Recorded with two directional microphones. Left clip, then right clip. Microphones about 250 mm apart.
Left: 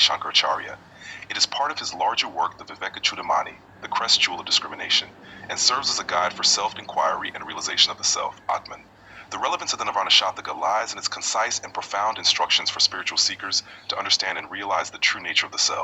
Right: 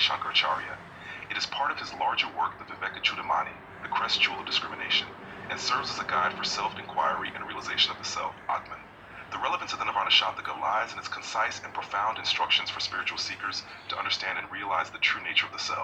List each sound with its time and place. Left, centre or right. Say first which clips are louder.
0.0 s speech: left 5 dB; left
10.2 s speech: left 5 dB; left
10.7 s speech: left 5 dB; left